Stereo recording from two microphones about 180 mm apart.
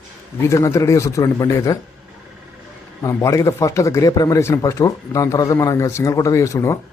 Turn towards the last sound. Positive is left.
turn(degrees=15)  # may be behind; listen again after turning